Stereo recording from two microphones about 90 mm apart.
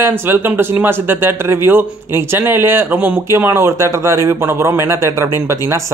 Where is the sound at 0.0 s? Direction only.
25° right (ahead or behind).